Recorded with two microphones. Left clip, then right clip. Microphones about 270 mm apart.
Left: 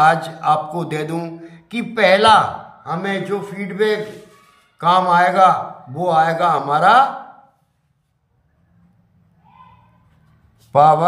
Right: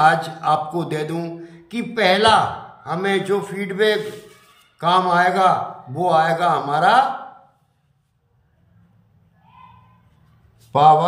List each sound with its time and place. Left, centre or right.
0.0 s a man's voice: centre
10.7 s a man's voice: centre